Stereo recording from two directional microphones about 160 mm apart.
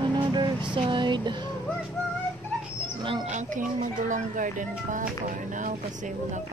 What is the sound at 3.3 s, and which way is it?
Speech, 50° right (ahead or behind).